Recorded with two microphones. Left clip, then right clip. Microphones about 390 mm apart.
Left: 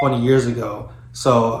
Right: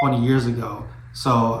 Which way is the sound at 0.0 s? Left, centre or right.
Centre.